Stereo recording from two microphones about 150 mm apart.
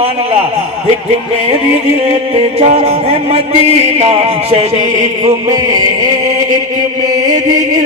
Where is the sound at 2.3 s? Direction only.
40° right (ahead or behind).